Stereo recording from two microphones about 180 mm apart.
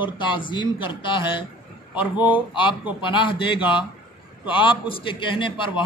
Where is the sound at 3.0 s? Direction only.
25° left (ahead or behind).